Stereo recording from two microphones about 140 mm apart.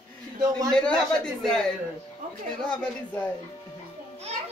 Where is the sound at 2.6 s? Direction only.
10° left (ahead or behind).